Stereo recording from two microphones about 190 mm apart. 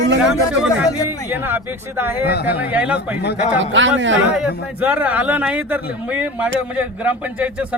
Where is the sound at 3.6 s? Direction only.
75° right (ahead or behind).